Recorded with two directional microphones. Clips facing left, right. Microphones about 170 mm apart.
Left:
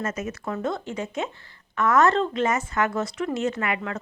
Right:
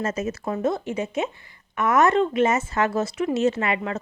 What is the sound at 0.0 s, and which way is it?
Speech, 30° right (ahead or behind).